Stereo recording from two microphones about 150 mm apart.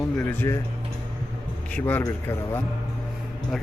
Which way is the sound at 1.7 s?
10° left (ahead or behind).